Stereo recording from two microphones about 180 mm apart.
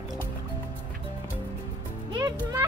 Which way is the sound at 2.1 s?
20° right (ahead or behind).